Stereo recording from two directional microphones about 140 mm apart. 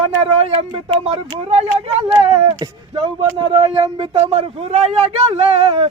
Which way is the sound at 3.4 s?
45° right (ahead or behind).